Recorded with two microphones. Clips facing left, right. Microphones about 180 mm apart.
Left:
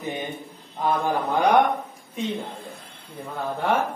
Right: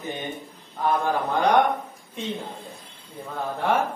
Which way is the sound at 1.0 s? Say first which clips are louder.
Left 1 dB; 15° left (ahead or behind).